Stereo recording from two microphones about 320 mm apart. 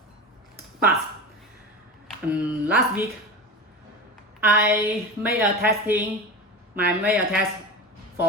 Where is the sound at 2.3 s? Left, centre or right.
Centre.